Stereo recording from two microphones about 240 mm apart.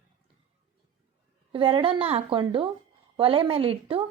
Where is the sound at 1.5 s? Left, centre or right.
Right.